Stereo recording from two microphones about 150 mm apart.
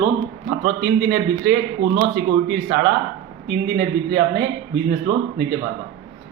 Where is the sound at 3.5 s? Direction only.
90° right.